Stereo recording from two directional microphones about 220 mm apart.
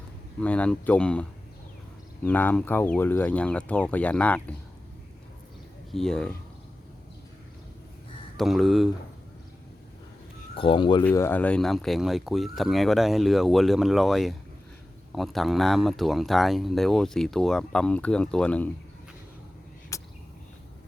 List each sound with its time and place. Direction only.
0.3 s speech: 5° left (ahead or behind)
2.2 s speech: 10° left (ahead or behind)
5.9 s speech: centre (ahead or behind)
8.4 s speech: centre (ahead or behind)
10.5 s speech: 25° left (ahead or behind)
11.0 s speech: 10° left (ahead or behind)
19.9 s a sound: 15° left (ahead or behind)